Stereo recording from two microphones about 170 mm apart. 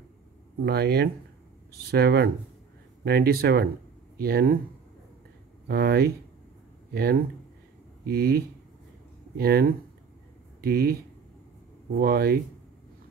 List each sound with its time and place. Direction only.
0.7 s speech: 70° right (ahead or behind)
5.7 s speech: 70° right (ahead or behind)
12.0 s speech: 65° right (ahead or behind)